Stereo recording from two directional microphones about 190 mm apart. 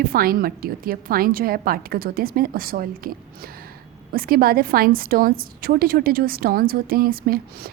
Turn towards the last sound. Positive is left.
turn(degrees=-50)  # may be behind; listen again after turning